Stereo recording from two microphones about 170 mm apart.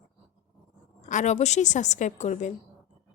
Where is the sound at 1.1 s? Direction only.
45° left (ahead or behind).